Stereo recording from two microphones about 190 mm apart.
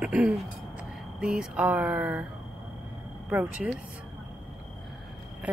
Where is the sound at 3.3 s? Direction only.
5° right (ahead or behind).